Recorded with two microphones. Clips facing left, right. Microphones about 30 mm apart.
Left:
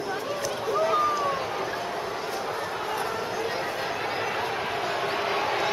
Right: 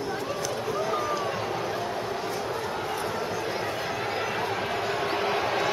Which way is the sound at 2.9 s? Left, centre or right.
Centre.